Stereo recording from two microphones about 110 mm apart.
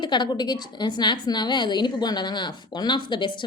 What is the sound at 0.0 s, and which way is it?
A woman's voice, 40° left (ahead or behind).